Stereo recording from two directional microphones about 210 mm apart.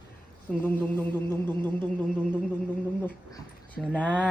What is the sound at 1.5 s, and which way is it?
Music, 20° right (ahead or behind).